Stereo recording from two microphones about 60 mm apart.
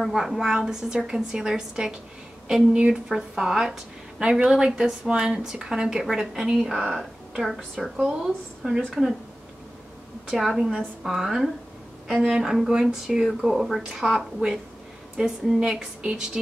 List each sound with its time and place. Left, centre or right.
0.0 s a woman's voice: centre
10.3 s a woman's voice: centre